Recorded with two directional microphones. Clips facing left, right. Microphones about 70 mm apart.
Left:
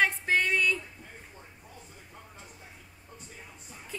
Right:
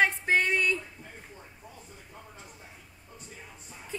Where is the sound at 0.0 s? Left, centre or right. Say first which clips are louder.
Right 1 dB; centre.